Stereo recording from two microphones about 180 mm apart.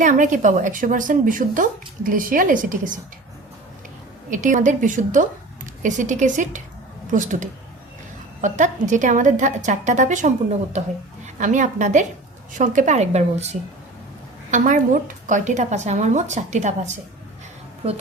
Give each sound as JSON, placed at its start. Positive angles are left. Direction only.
{"t": 0.0, "sound": "a woman's voice", "side_deg": -45}
{"t": 4.3, "sound": "a woman's voice", "side_deg": -45}